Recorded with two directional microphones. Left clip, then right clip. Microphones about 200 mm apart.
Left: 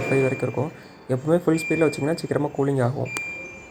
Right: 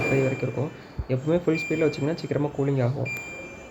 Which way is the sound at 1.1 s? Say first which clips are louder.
Left 3 dB; 5° left (ahead or behind).